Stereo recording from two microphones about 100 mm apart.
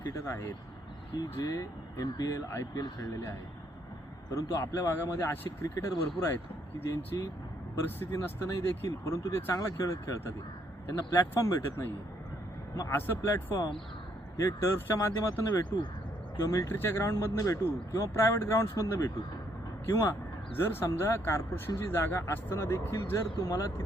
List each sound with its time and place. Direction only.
0.1 s speech: 30° left (ahead or behind)
4.3 s speech: 35° left (ahead or behind)
8.4 s speech: 30° left (ahead or behind)
13.0 s speech: 25° left (ahead or behind)
15.7 s speech: 40° left (ahead or behind)
16.7 s speech: 25° left (ahead or behind)